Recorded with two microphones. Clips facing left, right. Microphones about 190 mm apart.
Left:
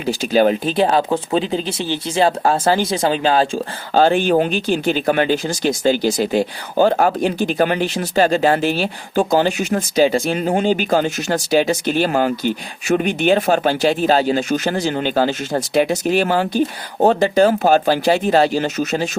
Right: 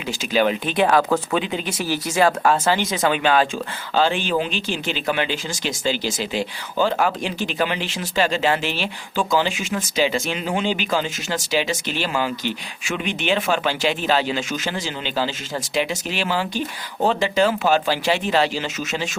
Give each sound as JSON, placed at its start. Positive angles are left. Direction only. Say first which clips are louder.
{"t": 0.0, "sound": "speech", "louder": "left 5 dB", "side_deg": 40}
{"t": 3.9, "sound": "speech", "louder": "left 6 dB", "side_deg": 50}